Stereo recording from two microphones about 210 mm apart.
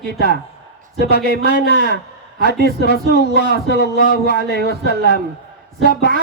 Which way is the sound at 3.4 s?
45° right (ahead or behind).